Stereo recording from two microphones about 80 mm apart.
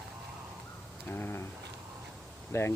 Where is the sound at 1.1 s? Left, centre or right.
Left.